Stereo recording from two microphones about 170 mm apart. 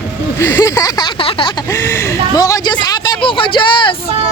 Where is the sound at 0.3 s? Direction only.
15° left (ahead or behind).